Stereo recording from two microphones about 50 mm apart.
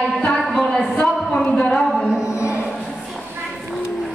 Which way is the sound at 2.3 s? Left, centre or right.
Left.